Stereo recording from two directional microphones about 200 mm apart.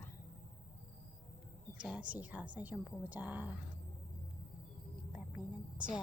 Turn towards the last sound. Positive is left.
turn(degrees=-5)  # may be behind; listen again after turning